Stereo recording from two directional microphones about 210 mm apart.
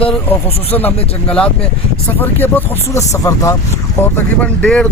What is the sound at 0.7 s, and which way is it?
Speech, 5° left (ahead or behind).